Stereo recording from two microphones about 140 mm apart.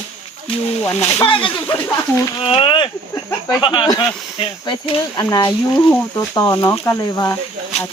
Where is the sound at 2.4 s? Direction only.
40° left (ahead or behind).